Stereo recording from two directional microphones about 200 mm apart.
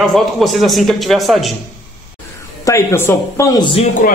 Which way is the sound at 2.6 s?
15° left (ahead or behind).